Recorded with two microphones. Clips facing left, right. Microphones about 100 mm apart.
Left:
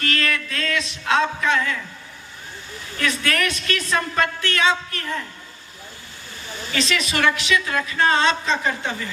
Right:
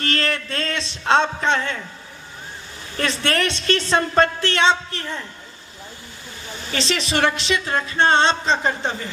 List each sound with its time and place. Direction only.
0.0 s music: 30° right (ahead or behind)
3.0 s speech: 30° right (ahead or behind)
6.7 s speech: 30° right (ahead or behind)